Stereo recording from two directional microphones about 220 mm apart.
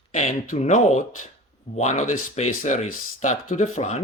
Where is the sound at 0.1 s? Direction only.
30° left (ahead or behind).